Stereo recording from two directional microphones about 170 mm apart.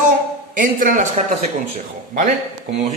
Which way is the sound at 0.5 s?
50° right (ahead or behind).